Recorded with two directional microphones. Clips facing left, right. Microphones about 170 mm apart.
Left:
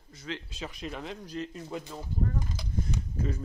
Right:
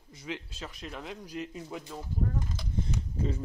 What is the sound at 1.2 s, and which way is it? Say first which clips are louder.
Speech: left 1 dB; 15° right (ahead or behind).